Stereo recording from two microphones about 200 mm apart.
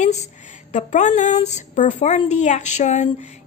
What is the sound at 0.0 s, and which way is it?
A woman's voice, 35° left (ahead or behind).